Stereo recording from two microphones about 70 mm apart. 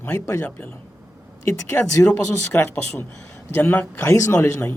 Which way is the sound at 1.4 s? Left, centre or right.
Left.